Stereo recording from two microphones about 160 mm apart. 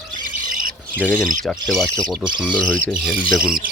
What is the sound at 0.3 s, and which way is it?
Squawk, 55° right (ahead or behind).